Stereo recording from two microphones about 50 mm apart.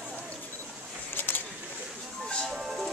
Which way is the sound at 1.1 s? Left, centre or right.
Left.